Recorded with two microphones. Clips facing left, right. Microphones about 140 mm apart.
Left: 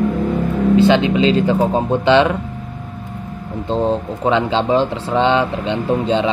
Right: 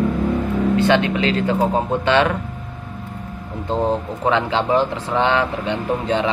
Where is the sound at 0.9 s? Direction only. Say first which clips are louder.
Left 4 dB; 20° left (ahead or behind).